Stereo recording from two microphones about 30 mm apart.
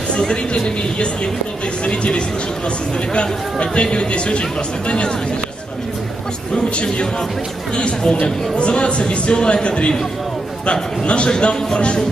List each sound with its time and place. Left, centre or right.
1.9 s a man's voice: left
6.5 s a man's voice: left